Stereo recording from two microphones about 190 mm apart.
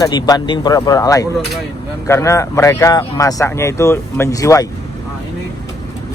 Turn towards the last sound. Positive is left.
turn(degrees=15)  # may be behind; listen again after turning